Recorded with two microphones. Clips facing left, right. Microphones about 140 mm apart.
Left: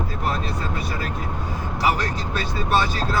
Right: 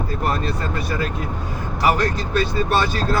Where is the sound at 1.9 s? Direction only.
60° right (ahead or behind).